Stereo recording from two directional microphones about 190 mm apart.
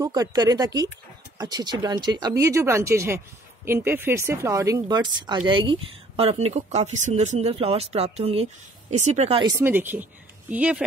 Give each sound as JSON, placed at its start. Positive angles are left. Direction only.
{"t": 0.0, "sound": "speech", "side_deg": -20}
{"t": 9.6, "sound": "speech", "side_deg": -10}